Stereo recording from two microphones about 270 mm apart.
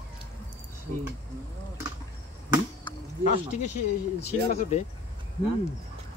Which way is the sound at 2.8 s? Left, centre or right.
Left.